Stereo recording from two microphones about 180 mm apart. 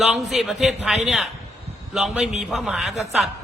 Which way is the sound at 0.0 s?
Centre (ahead or behind).